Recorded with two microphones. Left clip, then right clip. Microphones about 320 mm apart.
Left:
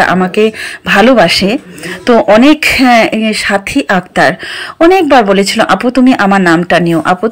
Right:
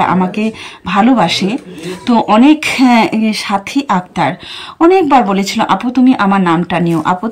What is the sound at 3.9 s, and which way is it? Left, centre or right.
Speech, left.